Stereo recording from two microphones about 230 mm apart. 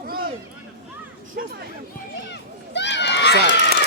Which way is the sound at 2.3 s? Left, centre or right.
Left.